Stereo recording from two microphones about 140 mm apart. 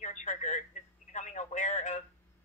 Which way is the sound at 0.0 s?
60° left (ahead or behind).